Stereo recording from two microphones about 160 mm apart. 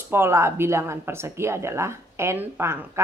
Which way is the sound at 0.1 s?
15° right (ahead or behind).